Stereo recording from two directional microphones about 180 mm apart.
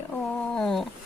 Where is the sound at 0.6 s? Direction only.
5° left (ahead or behind).